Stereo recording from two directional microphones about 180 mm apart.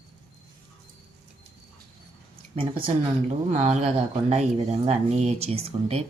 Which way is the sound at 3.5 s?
40° right (ahead or behind).